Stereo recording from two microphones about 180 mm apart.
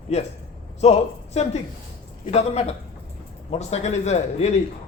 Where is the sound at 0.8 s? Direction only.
35° left (ahead or behind).